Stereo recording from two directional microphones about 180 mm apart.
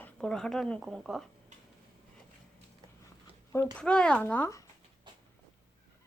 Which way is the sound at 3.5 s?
10° left (ahead or behind).